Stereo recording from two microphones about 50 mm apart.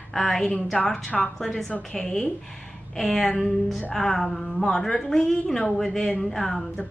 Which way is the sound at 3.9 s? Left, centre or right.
Centre.